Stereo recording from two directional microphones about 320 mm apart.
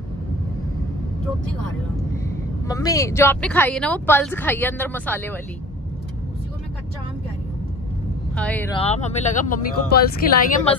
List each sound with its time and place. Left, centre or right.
2.2 s speech: centre
8.4 s speech: centre
8.7 s speech: centre